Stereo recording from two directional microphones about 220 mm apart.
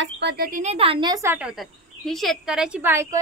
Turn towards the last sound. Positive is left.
turn(degrees=-10)  # may be behind; listen again after turning